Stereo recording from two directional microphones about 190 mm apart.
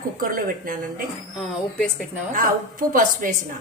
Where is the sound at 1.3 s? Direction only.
Centre (ahead or behind).